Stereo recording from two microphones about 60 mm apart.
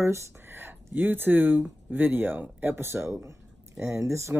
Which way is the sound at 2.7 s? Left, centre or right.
Right.